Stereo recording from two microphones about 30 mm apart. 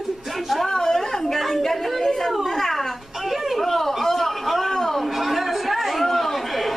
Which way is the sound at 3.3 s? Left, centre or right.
Centre.